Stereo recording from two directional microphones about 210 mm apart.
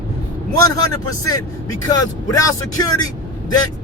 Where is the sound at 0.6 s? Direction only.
15° left (ahead or behind).